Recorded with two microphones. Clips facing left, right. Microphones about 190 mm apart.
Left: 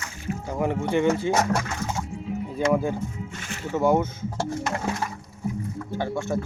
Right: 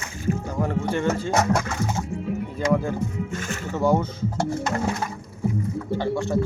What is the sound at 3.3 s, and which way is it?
Music, 45° right (ahead or behind).